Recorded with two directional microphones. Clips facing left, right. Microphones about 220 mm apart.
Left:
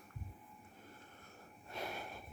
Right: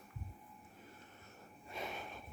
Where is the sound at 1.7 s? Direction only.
5° left (ahead or behind).